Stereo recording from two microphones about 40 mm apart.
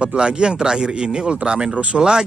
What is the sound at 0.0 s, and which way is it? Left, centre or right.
Speech, right.